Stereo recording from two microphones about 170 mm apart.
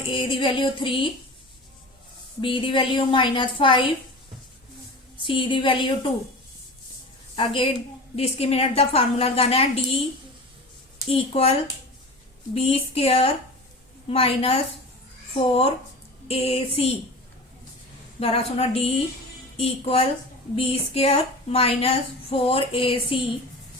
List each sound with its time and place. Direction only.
0.1 s a woman's voice: 30° left (ahead or behind)
2.4 s a woman's voice: 30° left (ahead or behind)
5.2 s a woman's voice: 30° left (ahead or behind)
7.3 s a woman's voice: 30° left (ahead or behind)
11.1 s a woman's voice: 35° left (ahead or behind)
12.5 s a woman's voice: 35° left (ahead or behind)
18.2 s a woman's voice: 35° left (ahead or behind)